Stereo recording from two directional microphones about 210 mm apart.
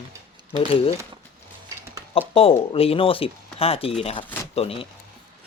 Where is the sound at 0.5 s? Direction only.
25° left (ahead or behind).